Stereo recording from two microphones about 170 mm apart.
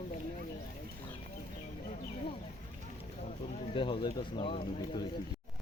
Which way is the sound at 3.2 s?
35° left (ahead or behind).